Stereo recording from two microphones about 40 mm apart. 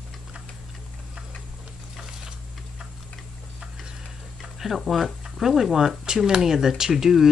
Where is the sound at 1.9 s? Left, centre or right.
Centre.